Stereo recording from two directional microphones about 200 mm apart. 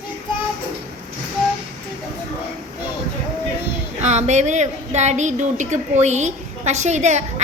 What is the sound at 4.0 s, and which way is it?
A woman's voice, 35° right (ahead or behind).